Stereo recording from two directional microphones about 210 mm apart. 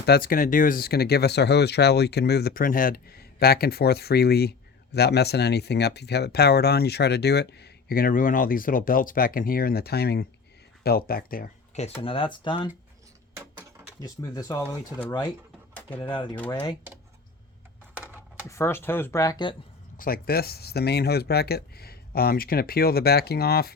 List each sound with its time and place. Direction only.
0.0 s speech: 45° left (ahead or behind); by 12.7 s 20° left (ahead or behind)
13.3 s a sound: 15° right (ahead or behind)
14.0 s speech: 15° left (ahead or behind)
15.7 s pigeon: 5° left (ahead or behind)
16.0 s speech: 20° left (ahead or behind)
17.9 s a sound: 5° right (ahead or behind)
18.4 s speech: 15° left (ahead or behind)
20.0 s speech: 45° left (ahead or behind)